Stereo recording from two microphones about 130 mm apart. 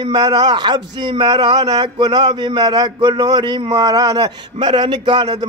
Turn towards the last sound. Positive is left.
turn(degrees=-35)  # may be behind; listen again after turning